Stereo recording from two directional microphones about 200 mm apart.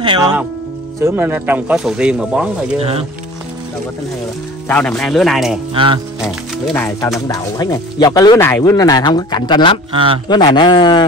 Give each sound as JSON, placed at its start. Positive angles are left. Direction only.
{"t": 0.0, "sound": "speech", "side_deg": -20}
{"t": 2.8, "sound": "speech", "side_deg": -30}
{"t": 4.6, "sound": "speech", "side_deg": 5}
{"t": 7.0, "sound": "speech", "side_deg": 15}
{"t": 9.9, "sound": "speech", "side_deg": -25}
{"t": 10.2, "sound": "speech", "side_deg": 20}